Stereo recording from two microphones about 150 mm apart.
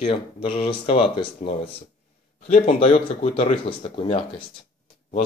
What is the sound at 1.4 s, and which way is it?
Speech, 50° left (ahead or behind).